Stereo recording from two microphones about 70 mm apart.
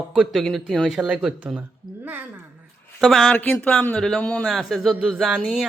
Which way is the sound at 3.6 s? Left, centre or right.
Centre.